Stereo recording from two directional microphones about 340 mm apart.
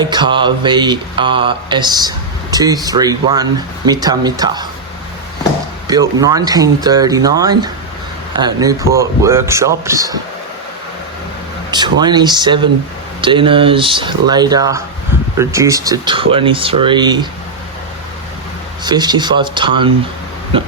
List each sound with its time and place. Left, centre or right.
0.0 s mantra: centre
5.9 s mantra: centre
11.7 s mantra: centre
18.9 s mantra: centre